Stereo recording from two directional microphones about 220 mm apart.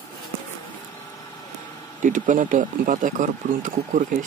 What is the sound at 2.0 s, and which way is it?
Speech, 35° right (ahead or behind).